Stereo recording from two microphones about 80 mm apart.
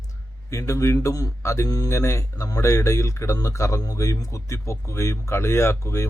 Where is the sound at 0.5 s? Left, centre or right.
Left.